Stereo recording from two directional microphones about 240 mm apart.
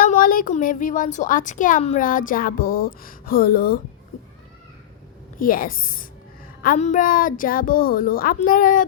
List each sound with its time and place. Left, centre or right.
0.0 s speech: left
5.4 s speech: left